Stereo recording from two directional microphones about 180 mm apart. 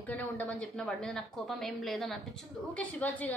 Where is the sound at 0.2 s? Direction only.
10° left (ahead or behind).